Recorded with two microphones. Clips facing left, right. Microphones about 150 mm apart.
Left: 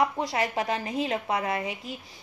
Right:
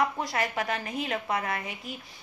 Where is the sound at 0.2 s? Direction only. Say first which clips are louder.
Left 2 dB; 25° left (ahead or behind).